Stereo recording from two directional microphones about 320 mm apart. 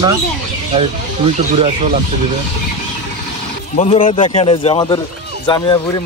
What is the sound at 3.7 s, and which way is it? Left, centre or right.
Speech, centre.